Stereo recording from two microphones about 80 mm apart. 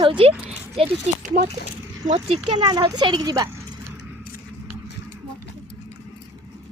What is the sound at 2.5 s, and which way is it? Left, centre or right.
Speech, right.